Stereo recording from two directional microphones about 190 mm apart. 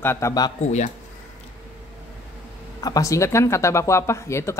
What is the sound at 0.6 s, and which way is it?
Speech, 40° left (ahead or behind).